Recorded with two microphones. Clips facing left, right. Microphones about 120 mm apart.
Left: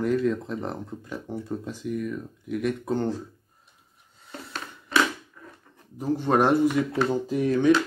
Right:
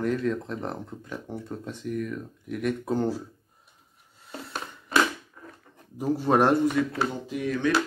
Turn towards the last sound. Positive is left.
turn(degrees=35)  # may be behind; listen again after turning